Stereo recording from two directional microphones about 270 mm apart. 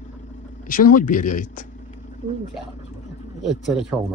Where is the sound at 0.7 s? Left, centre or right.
Left.